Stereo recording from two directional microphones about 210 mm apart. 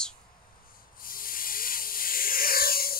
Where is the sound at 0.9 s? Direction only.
40° left (ahead or behind).